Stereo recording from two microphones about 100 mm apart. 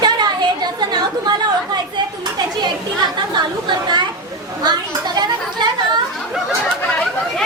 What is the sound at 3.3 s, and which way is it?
Chatter, 50° right (ahead or behind).